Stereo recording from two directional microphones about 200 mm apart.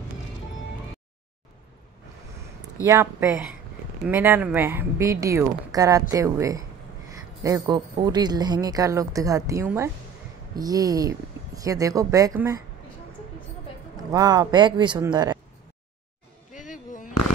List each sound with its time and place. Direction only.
2.8 s speech: 15° right (ahead or behind)
14.1 s speech: 20° right (ahead or behind)
16.5 s music: 40° left (ahead or behind)